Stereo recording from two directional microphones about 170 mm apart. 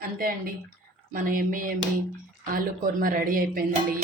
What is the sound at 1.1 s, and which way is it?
A woman's voice, 50° right (ahead or behind).